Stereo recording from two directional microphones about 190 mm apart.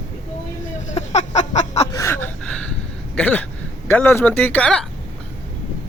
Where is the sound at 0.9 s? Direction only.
35° left (ahead or behind).